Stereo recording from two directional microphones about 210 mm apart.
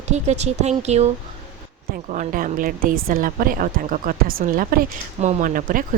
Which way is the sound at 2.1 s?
40° right (ahead or behind).